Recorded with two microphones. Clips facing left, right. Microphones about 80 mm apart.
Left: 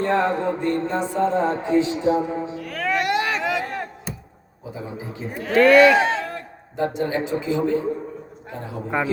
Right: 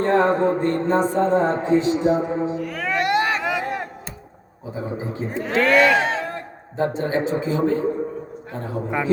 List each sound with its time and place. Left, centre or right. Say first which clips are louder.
0.0 s speech: right 3 dB; right
2.6 s a sound: even; centre
4.7 s a man's voice: right 5 dB; right
5.4 s a man's voice: left 4 dB; centre
5.6 s speech: left 4 dB; centre
6.2 s a man's voice: right 2 dB; right